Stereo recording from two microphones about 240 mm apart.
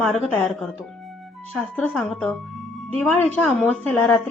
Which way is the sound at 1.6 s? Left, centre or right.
Centre.